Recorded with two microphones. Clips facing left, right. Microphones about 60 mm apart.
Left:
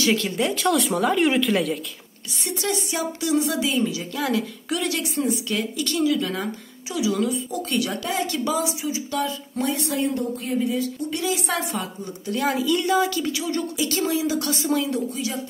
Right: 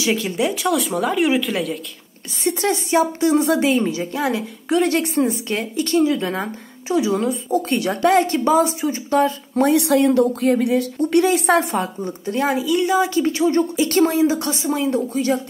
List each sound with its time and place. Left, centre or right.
0.0 s speech: centre
2.4 s speech: right
8.0 s a woman's voice: right
8.3 s speech: right
9.7 s speech: right
12.5 s a woman's voice: centre
13.0 s speech: right
14.9 s speech: right